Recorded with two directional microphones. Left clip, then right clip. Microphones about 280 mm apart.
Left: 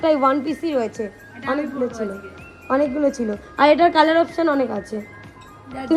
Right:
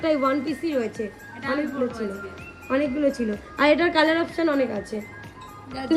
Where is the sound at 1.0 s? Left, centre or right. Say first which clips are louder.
Left 3 dB; left.